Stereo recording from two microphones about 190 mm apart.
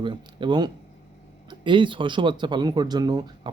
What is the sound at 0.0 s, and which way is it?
Speech, 25° right (ahead or behind).